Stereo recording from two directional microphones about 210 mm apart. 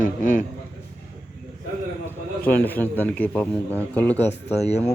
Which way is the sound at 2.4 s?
10° left (ahead or behind).